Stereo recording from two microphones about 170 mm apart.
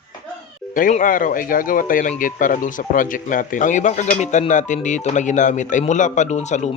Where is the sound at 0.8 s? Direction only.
50° left (ahead or behind).